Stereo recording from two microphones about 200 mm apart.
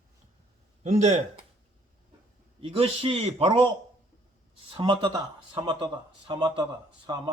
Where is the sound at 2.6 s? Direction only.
30° right (ahead or behind).